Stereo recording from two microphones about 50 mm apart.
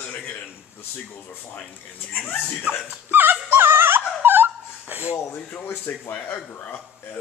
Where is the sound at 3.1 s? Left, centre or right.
Right.